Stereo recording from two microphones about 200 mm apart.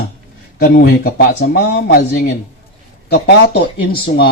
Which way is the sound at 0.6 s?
50° left (ahead or behind).